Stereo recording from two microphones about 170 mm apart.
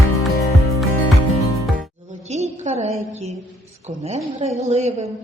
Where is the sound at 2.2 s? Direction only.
40° right (ahead or behind).